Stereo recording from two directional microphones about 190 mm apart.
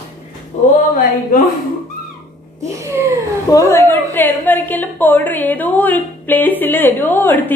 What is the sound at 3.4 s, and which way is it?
A woman's voice, 15° left (ahead or behind).